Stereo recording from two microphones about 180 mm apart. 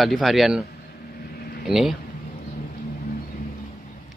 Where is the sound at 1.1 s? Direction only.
55° left (ahead or behind).